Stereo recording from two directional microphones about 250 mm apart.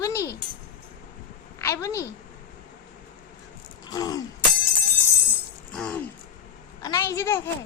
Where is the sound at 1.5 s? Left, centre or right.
Centre.